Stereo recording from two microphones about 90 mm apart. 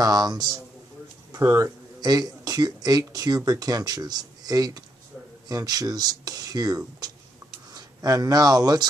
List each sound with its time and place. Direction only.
0.0 s speech: 45° right (ahead or behind)
1.3 s speech: 35° right (ahead or behind)
2.0 s speech: 50° right (ahead or behind)